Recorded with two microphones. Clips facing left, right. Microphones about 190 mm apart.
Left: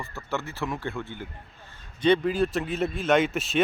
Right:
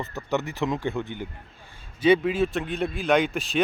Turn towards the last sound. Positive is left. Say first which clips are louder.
# even
turn(degrees=0)  # may be behind; listen again after turning